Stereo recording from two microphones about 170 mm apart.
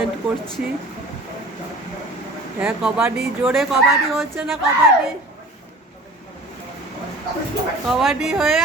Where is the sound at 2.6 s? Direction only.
5° right (ahead or behind).